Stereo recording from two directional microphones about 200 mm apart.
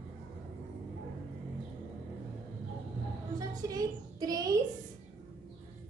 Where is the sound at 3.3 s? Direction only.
20° right (ahead or behind).